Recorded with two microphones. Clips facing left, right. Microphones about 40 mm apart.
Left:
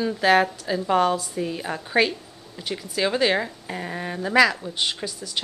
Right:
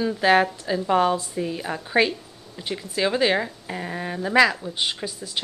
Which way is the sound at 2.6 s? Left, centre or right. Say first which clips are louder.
Even; centre.